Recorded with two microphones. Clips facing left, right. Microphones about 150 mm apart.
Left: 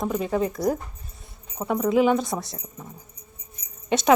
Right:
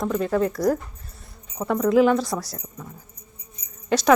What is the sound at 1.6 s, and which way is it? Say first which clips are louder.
Speech: right 2 dB; 5° left (ahead or behind).